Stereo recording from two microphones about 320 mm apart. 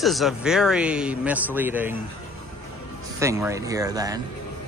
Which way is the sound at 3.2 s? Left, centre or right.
Centre.